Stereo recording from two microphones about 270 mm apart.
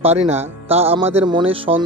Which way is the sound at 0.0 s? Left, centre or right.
Right.